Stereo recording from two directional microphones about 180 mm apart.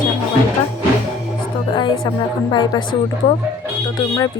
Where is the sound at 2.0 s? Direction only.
25° left (ahead or behind).